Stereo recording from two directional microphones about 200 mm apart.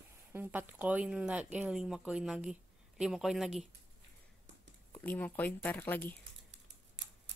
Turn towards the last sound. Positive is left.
turn(degrees=10)  # may be behind; listen again after turning